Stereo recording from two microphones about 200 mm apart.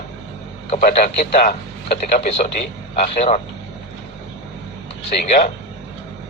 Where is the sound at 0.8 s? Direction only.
40° left (ahead or behind).